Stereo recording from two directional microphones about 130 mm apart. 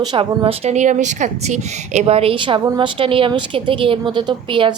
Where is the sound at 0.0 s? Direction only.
40° right (ahead or behind).